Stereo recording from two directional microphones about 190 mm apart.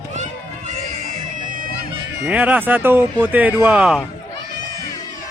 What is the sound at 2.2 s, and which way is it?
A man's voice, 10° right (ahead or behind).